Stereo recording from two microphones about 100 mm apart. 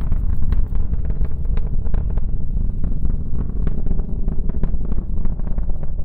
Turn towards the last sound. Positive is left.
turn(degrees=15)  # may be behind; listen again after turning